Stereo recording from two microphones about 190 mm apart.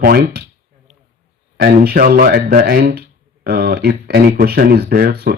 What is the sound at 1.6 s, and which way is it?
A man's voice, 55° right (ahead or behind).